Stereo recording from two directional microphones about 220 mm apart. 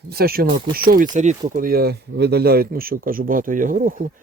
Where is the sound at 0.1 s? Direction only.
45° right (ahead or behind).